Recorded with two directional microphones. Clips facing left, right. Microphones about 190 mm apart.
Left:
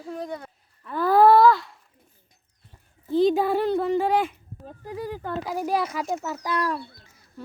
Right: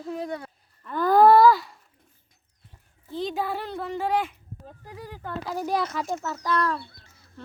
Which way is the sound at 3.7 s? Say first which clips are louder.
Left 9 dB; 40° left (ahead or behind).